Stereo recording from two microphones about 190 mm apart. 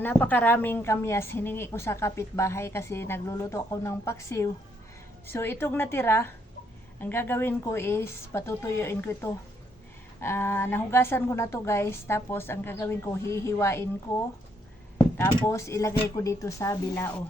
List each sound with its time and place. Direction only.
0.0 s a woman's voice: 10° left (ahead or behind)
15.4 s a woman's voice: 15° left (ahead or behind)